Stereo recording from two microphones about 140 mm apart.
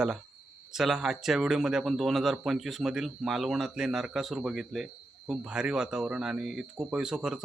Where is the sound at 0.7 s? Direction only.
Centre (ahead or behind).